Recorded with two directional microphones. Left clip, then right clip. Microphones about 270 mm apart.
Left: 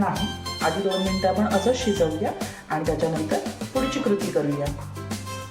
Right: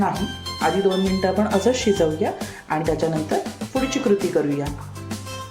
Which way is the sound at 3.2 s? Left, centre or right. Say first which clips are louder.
Right 2 dB; centre.